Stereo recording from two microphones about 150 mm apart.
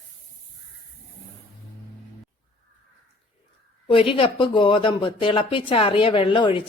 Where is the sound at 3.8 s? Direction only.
35° left (ahead or behind).